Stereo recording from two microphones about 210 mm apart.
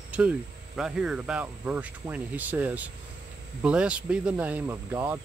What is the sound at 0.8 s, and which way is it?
Speech, 5° right (ahead or behind).